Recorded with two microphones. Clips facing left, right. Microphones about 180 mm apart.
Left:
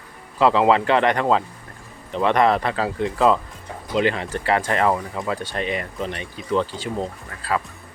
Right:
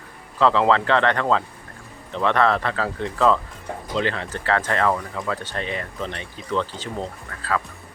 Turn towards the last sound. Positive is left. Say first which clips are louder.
# left 1 dB
turn(degrees=10)  # may be behind; listen again after turning